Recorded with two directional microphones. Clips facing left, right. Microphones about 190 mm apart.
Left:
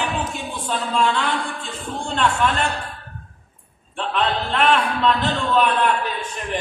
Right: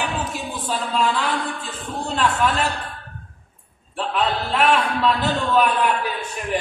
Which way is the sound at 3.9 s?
5° right (ahead or behind).